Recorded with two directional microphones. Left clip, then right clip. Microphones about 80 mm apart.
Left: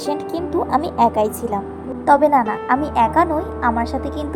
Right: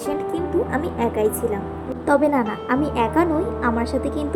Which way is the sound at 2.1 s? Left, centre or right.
Left.